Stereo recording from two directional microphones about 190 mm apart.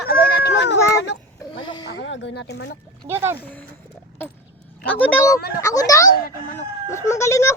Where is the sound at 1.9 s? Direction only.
75° left (ahead or behind).